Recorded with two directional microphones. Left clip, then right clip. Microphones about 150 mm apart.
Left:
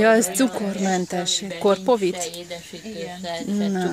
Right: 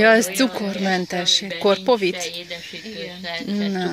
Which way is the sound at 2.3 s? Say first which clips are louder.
Right 3 dB; 35° left (ahead or behind).